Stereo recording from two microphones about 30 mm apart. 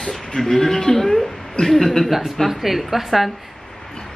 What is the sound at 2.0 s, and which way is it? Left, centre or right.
A woman's voice, centre.